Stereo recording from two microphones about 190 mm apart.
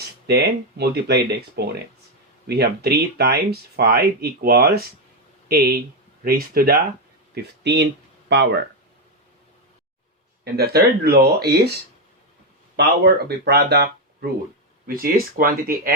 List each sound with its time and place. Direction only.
0.3 s speech: 60° right (ahead or behind)
7.3 s speech: 65° right (ahead or behind)
10.4 s speech: 55° right (ahead or behind)
12.7 s speech: 55° right (ahead or behind)